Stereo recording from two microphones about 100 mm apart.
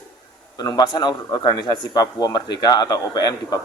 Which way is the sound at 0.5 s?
45° left (ahead or behind).